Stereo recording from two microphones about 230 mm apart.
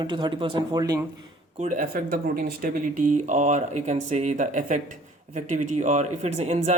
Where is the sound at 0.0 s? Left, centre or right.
Centre.